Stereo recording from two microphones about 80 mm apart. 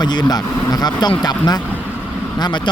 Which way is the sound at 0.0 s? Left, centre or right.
Left.